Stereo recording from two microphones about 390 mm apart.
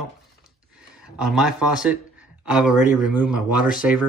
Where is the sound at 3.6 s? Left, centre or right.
Left.